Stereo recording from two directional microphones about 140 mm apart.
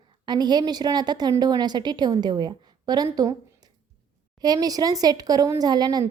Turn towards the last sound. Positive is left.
turn(degrees=-30)  # may be behind; listen again after turning